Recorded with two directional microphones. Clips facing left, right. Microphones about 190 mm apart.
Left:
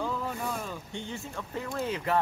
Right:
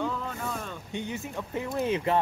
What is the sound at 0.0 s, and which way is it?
Boat, 5° left (ahead or behind).